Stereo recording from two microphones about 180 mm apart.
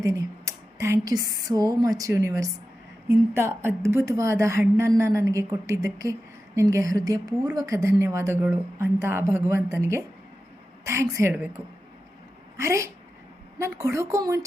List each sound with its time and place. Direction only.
0.0 s a woman's voice: 15° right (ahead or behind)
12.5 s a woman's voice: 15° right (ahead or behind)